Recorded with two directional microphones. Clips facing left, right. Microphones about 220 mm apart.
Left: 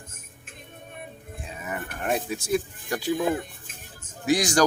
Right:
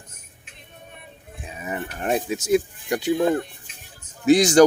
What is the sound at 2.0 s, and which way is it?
Speech, 20° right (ahead or behind).